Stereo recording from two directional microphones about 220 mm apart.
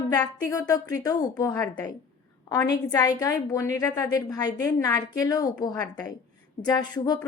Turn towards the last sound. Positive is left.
turn(degrees=20)  # may be behind; listen again after turning